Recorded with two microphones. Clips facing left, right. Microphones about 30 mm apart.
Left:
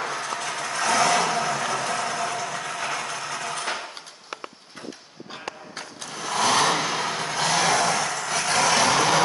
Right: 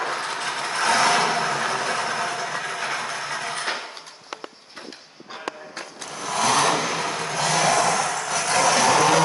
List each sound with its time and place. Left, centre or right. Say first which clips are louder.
0.0 s vehicle: right 2 dB; right
5.8 s vehicle: right 1 dB; centre